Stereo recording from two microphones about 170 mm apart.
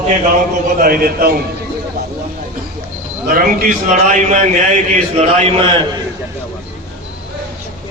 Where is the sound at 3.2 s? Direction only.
50° right (ahead or behind).